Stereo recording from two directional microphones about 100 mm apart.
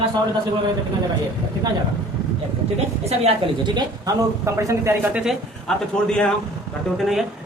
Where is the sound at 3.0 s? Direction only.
90° right.